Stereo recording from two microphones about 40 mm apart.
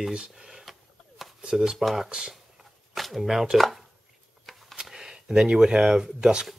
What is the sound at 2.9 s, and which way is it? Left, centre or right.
Speech, centre.